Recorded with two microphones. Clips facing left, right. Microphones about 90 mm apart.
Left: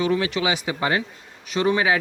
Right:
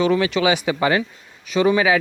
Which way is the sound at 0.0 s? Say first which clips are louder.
Right 4 dB; 90° right.